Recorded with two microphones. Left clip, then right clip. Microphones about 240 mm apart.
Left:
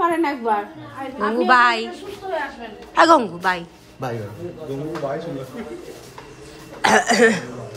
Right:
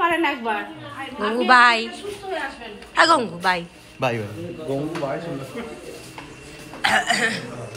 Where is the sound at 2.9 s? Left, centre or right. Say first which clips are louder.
Left 3 dB; centre.